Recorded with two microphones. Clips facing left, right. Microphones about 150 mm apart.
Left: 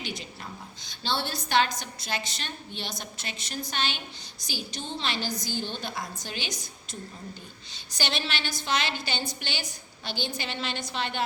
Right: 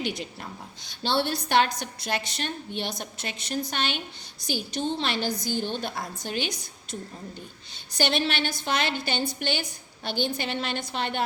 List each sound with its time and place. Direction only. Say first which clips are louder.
0.0 s a woman's voice: right 6 dB; 60° right (ahead or behind)
7.9 s a woman's voice: right 6 dB; 55° right (ahead or behind)